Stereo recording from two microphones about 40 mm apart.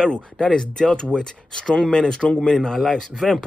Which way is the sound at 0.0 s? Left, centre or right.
Left.